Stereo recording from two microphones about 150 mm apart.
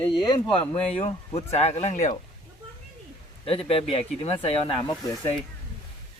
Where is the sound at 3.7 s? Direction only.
40° left (ahead or behind).